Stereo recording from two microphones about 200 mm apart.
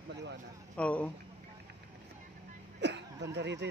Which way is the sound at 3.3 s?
60° right (ahead or behind).